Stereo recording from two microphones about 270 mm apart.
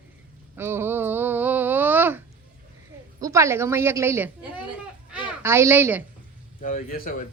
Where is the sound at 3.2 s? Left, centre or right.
Centre.